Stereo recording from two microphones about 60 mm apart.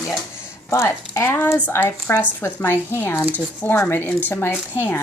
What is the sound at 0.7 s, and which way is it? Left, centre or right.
Speech, left.